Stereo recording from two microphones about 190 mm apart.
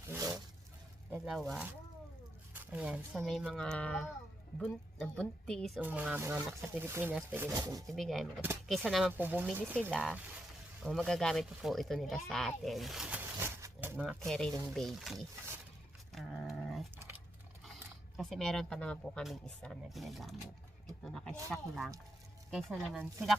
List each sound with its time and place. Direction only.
0.1 s a sound: 15° right (ahead or behind)
1.1 s speech: 5° right (ahead or behind)
2.7 s speech: 5° right (ahead or behind)
5.8 s speech: 5° right (ahead or behind)
7.9 s speech: centre (ahead or behind)
14.3 s speech: 5° left (ahead or behind)
16.1 s a sound: centre (ahead or behind)
18.2 s speech: 5° left (ahead or behind)